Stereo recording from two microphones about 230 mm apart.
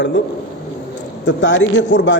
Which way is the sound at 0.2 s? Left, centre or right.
Left.